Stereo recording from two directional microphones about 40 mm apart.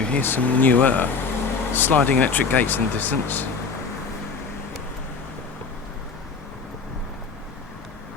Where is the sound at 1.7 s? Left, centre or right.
Left.